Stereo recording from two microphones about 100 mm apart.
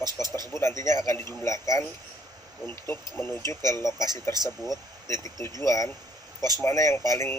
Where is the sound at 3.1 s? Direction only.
25° left (ahead or behind).